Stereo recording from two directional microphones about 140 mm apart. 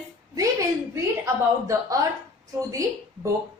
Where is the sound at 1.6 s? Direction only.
25° right (ahead or behind).